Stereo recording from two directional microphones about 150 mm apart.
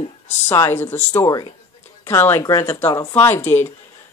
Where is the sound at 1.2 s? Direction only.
25° left (ahead or behind).